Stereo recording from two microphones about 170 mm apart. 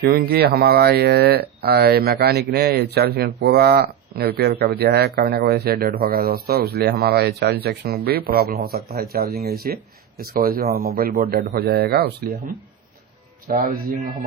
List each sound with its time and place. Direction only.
0.0 s speech: 70° right (ahead or behind)
13.6 s a man's voice: 55° right (ahead or behind)